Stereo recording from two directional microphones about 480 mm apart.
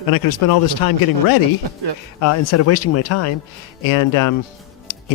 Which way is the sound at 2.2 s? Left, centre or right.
Left.